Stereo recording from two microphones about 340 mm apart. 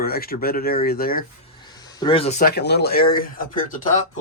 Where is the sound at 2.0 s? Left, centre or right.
Centre.